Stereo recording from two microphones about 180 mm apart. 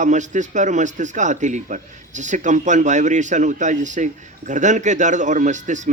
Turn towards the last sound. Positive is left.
turn(degrees=-40)  # may be behind; listen again after turning